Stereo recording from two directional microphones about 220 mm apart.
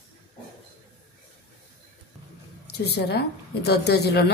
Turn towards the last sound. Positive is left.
turn(degrees=50)  # may be behind; listen again after turning